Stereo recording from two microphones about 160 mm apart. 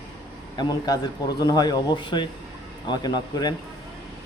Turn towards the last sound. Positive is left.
turn(degrees=25)  # may be behind; listen again after turning